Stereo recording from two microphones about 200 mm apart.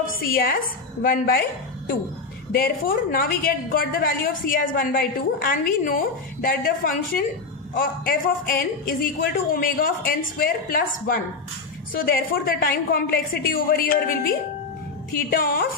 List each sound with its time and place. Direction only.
0.2 s a woman's voice: 50° left (ahead or behind)
2.5 s a woman's voice: 50° left (ahead or behind)